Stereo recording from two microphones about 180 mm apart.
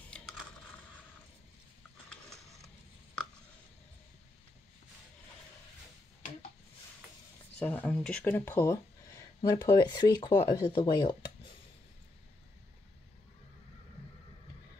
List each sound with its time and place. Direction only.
0.2 s crushing: 5° left (ahead or behind)
7.5 s speech: 5° left (ahead or behind); by 11.1 s 25° left (ahead or behind)